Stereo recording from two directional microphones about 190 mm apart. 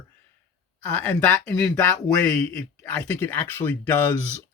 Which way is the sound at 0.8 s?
10° left (ahead or behind).